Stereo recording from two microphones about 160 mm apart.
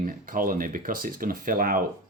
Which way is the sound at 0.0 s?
60° right (ahead or behind).